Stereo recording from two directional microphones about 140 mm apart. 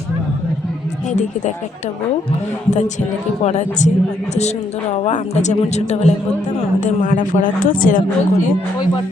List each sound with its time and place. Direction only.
3.4 s a woman's voice: 55° left (ahead or behind)
6.7 s speech: 70° left (ahead or behind)